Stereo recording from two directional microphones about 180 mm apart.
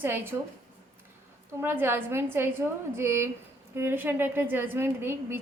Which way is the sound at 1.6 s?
10° right (ahead or behind).